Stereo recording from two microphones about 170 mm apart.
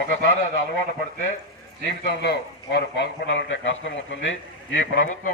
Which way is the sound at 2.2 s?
75° left (ahead or behind).